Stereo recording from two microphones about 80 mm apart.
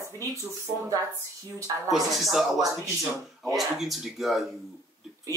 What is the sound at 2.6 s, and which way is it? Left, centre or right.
Speech, right.